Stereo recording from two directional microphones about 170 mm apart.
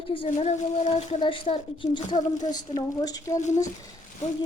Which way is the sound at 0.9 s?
30° left (ahead or behind).